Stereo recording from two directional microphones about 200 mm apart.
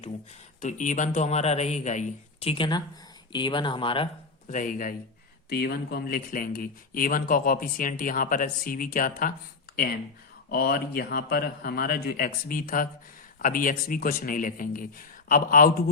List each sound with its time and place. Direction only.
0.6 s a man's voice: 40° left (ahead or behind)
4.4 s speech: 40° left (ahead or behind)
10.5 s speech: 50° left (ahead or behind)